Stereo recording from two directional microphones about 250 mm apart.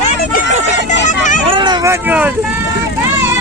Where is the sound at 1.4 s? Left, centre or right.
Centre.